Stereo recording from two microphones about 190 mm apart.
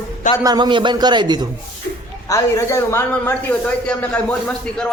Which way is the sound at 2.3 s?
15° left (ahead or behind).